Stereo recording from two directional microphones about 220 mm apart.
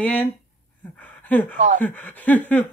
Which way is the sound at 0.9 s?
5° left (ahead or behind).